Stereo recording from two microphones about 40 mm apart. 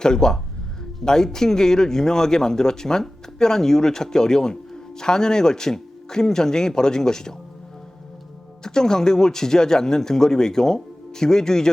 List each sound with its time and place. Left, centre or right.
0.0 s speech: centre
8.6 s speech: centre